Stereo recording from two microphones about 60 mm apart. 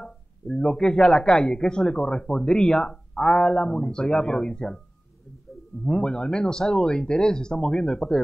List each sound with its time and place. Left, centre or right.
0.0 s a man's voice: centre
5.9 s a man's voice: centre